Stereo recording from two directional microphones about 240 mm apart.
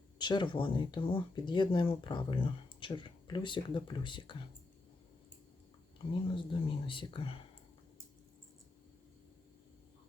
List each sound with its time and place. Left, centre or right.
0.2 s speech: centre
6.2 s speech: left